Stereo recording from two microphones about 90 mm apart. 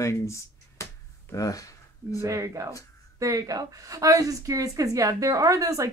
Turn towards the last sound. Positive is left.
turn(degrees=-40)  # may be behind; listen again after turning